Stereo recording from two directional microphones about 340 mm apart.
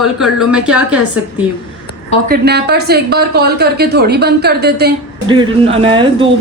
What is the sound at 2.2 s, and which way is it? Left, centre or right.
A woman's voice, right.